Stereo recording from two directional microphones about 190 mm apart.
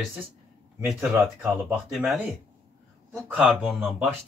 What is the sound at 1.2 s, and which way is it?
Speech, centre (ahead or behind).